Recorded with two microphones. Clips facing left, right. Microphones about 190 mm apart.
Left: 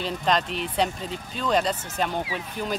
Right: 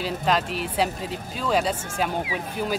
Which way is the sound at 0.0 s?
5° right (ahead or behind).